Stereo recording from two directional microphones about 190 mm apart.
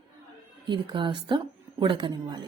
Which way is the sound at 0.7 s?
25° right (ahead or behind).